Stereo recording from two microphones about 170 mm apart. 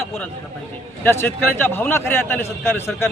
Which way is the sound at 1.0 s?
15° left (ahead or behind).